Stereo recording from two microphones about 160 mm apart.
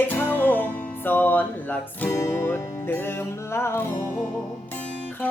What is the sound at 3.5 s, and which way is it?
Music, 15° left (ahead or behind).